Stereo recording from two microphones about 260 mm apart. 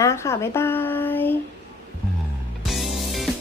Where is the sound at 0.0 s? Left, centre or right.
Centre.